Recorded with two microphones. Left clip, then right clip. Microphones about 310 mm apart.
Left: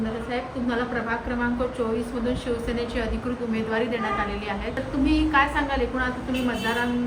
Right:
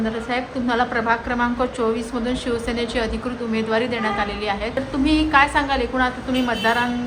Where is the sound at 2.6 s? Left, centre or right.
Centre.